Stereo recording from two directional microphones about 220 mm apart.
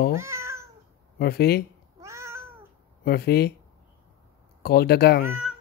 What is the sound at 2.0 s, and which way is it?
Cat, 10° right (ahead or behind).